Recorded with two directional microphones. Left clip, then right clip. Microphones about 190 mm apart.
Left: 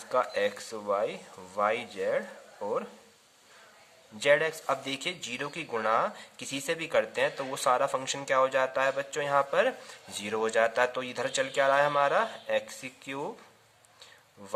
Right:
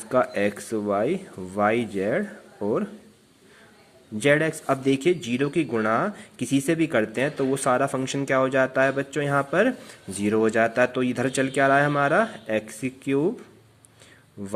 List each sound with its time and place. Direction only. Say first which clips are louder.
0.1 s speech: right 5 dB; 15° right (ahead or behind)
4.2 s speech: right 4 dB; 15° right (ahead or behind)